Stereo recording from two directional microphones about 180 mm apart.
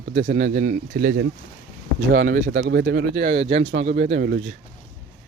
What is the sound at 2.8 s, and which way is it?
Speech, 60° right (ahead or behind).